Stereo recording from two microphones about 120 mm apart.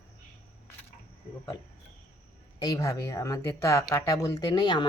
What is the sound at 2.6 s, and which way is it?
Speech, 30° left (ahead or behind).